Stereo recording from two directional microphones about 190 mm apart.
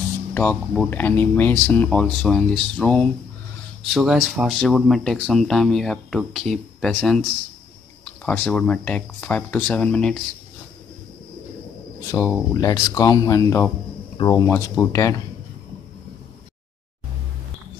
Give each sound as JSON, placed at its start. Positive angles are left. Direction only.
{"t": 0.3, "sound": "speech", "side_deg": 10}
{"t": 12.1, "sound": "speech", "side_deg": 15}